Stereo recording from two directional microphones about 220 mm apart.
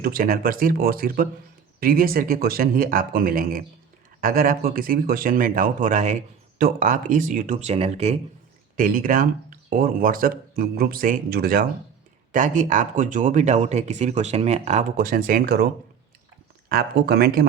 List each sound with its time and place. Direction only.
0.0 s speech: 40° right (ahead or behind)
8.7 s speech: 40° right (ahead or behind)